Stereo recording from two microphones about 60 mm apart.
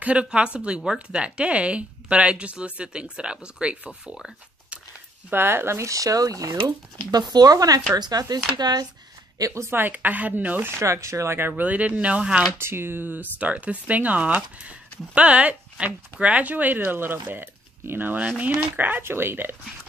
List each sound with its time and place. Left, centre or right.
0.0 s speech: centre
5.3 s speech: right
7.1 s speech: right
9.4 s speech: right
9.8 s speech: right
10.8 s speech: right
11.3 s speech: right; by 12.4 s centre
12.5 s speech: right